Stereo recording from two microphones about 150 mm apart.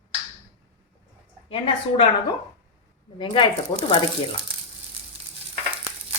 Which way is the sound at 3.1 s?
35° left (ahead or behind).